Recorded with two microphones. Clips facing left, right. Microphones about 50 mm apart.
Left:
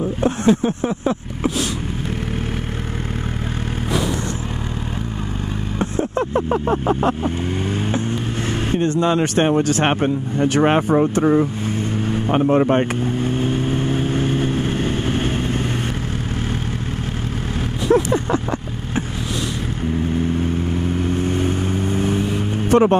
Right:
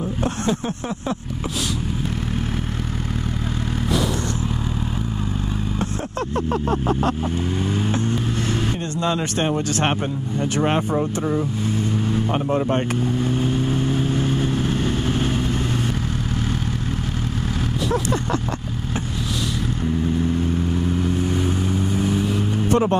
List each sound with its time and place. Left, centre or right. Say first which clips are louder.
0.2 s vehicle: left 7 dB; centre
6.7 s vehicle: left 3 dB; centre
10.6 s speech: left 5 dB; left
12.1 s vehicle: left 7 dB; left
21.2 s vehicle: left 2 dB; left
22.1 s music: left 1 dB; centre